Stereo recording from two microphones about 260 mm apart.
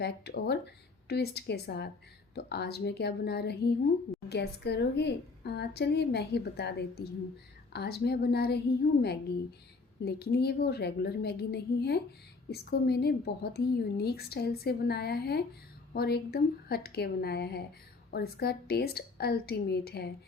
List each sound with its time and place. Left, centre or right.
0.0 s a woman's voice: left